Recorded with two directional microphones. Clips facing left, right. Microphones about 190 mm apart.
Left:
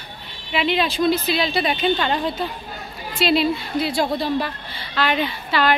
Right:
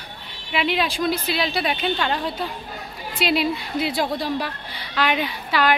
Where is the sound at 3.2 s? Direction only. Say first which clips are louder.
Left 3 dB; 15° right (ahead or behind).